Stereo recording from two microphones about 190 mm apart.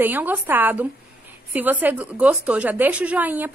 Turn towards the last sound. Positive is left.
turn(degrees=-10)  # may be behind; listen again after turning